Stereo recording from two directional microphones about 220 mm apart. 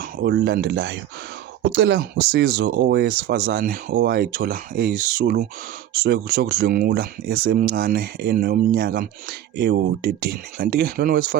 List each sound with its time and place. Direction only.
0.0 s speech: 45° right (ahead or behind)